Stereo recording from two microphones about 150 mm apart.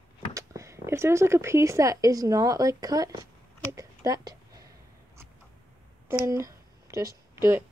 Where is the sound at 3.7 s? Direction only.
25° right (ahead or behind).